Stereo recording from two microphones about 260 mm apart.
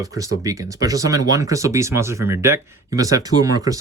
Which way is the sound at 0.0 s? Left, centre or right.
Centre.